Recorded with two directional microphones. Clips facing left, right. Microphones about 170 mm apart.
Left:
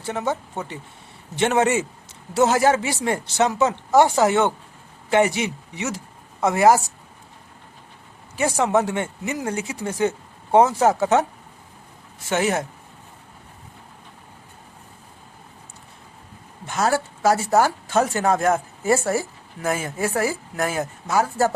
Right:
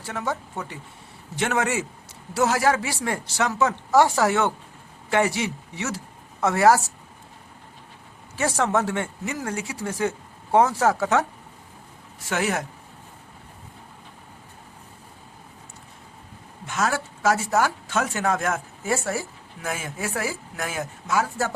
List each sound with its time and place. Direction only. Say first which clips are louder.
0.0 s speech: left 4 dB; 25° left (ahead or behind)
8.4 s speech: left 3 dB; 15° left (ahead or behind)
12.3 s speech: left 4 dB; 25° left (ahead or behind)
16.6 s speech: left 4 dB; 35° left (ahead or behind)